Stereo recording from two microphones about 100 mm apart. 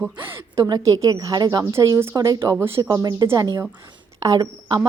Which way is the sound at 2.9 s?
40° right (ahead or behind).